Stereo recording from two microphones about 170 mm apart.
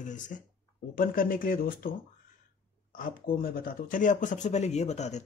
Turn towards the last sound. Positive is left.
turn(degrees=40)  # may be behind; listen again after turning